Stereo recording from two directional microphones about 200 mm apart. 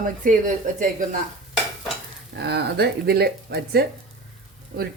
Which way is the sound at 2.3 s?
55° right (ahead or behind).